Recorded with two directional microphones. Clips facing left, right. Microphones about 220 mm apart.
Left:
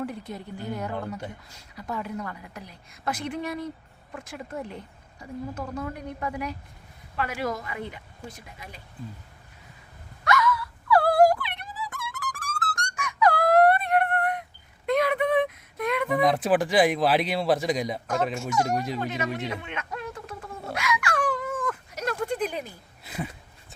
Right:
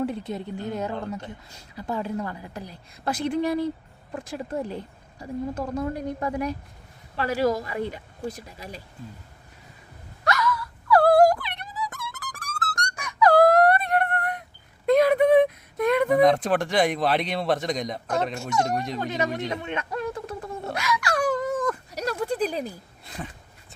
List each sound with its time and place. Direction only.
0.0 s a woman's voice: 25° right (ahead or behind)
10.2 s wail: 35° right (ahead or behind)
13.0 s a sound: 35° right (ahead or behind)
16.1 s speech: 5° left (ahead or behind)
19.6 s a sound: 40° right (ahead or behind)
23.0 s speech: 5° left (ahead or behind)